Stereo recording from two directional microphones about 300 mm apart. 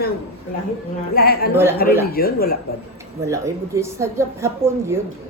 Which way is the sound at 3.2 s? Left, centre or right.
Centre.